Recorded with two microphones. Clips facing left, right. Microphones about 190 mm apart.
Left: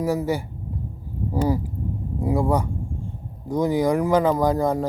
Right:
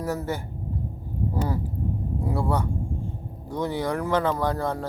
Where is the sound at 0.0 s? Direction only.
10° left (ahead or behind).